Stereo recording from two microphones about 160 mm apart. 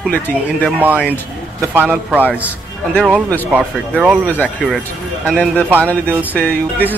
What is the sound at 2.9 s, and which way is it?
Speech, 5° left (ahead or behind).